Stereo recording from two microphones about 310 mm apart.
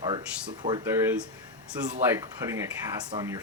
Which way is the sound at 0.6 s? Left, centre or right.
Centre.